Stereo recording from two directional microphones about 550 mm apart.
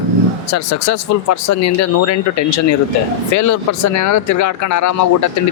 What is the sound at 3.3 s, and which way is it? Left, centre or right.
Speech, left.